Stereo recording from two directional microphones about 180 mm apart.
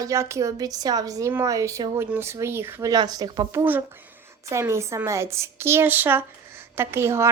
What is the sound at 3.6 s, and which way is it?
A woman's voice, 10° right (ahead or behind).